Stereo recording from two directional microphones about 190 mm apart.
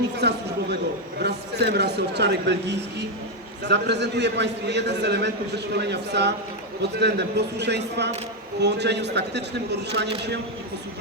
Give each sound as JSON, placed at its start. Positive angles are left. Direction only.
{"t": 0.2, "sound": "a man's voice", "side_deg": -60}